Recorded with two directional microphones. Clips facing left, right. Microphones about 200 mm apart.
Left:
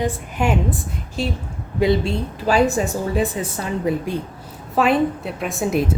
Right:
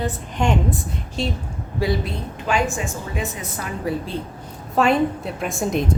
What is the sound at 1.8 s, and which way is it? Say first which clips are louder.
A woman's voice: left 5 dB; 25° left (ahead or behind).